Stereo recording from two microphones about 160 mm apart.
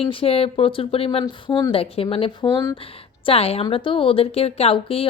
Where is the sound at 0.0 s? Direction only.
35° left (ahead or behind).